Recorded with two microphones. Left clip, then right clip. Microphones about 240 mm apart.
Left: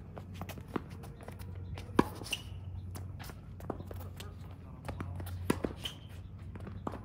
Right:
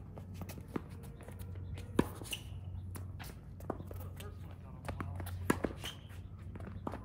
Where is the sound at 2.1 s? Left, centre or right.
Left.